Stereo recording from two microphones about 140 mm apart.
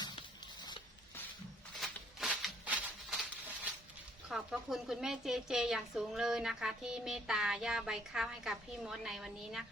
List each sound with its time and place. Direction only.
0.0 s music: 30° left (ahead or behind)
1.8 s a sound: 5° right (ahead or behind)
4.3 s a woman's voice: centre (ahead or behind)